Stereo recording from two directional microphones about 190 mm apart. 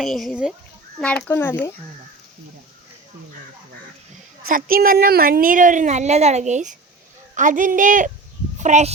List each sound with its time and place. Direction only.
0.0 s speech: centre (ahead or behind)
1.3 s speech: 10° left (ahead or behind)
4.4 s a woman's voice: 50° right (ahead or behind)